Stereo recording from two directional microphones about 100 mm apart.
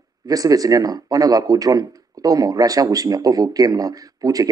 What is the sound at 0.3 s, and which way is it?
Speech, 40° right (ahead or behind).